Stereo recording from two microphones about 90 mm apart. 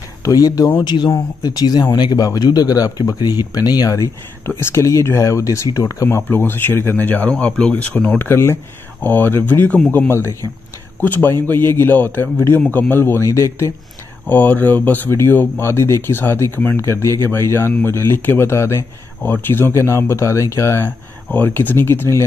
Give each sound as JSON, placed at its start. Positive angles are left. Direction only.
{"t": 0.2, "sound": "speech", "side_deg": 40}
{"t": 0.8, "sound": "speech", "side_deg": 50}
{"t": 4.5, "sound": "speech", "side_deg": 30}
{"t": 6.2, "sound": "speech", "side_deg": 25}
{"t": 8.2, "sound": "speech", "side_deg": 25}
{"t": 11.0, "sound": "speech", "side_deg": 20}
{"t": 12.6, "sound": "speech", "side_deg": 20}
{"t": 14.2, "sound": "speech", "side_deg": 20}